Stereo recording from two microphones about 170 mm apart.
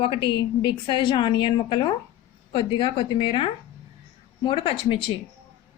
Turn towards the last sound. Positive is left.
turn(degrees=30)  # may be behind; listen again after turning